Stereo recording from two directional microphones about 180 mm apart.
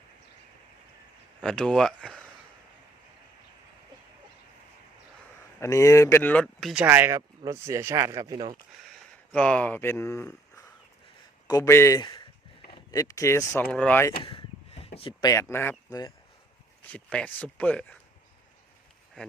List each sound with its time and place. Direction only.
1.4 s speech: 5° left (ahead or behind)
5.5 s speech: 15° left (ahead or behind); by 6.8 s centre (ahead or behind)
6.8 s speech: 10° right (ahead or behind)
9.3 s speech: 5° left (ahead or behind)
14.2 s a sound: 30° left (ahead or behind); by 15.7 s 15° left (ahead or behind)
15.9 s speech: 20° left (ahead or behind)
16.9 s speech: 5° left (ahead or behind)